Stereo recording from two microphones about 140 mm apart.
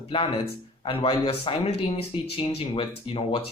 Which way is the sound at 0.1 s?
35° left (ahead or behind).